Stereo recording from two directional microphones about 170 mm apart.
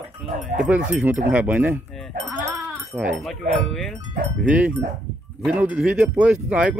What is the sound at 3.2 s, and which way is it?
Speech, centre (ahead or behind).